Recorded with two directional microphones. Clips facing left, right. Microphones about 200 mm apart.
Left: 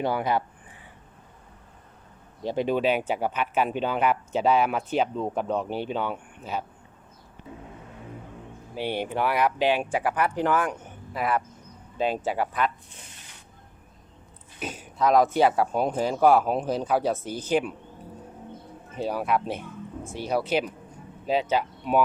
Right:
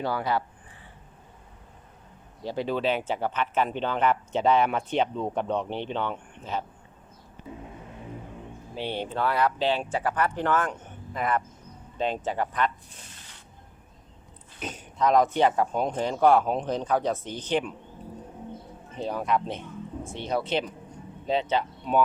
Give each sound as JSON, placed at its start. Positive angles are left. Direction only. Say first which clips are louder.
{"t": 0.0, "sound": "speech", "louder": "left 2 dB", "side_deg": 20}
{"t": 2.4, "sound": "speech", "louder": "left 3 dB", "side_deg": 20}
{"t": 8.7, "sound": "speech", "louder": "left 3 dB", "side_deg": 10}
{"t": 14.6, "sound": "speech", "louder": "left 1 dB", "side_deg": 5}
{"t": 18.9, "sound": "speech", "louder": "left 1 dB", "side_deg": 5}